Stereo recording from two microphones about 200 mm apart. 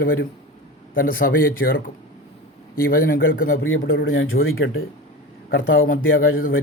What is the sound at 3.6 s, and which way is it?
Speech, 75° left (ahead or behind).